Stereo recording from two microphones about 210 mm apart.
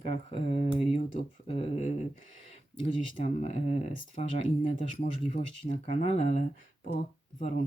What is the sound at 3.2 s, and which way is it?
Speech, 30° left (ahead or behind).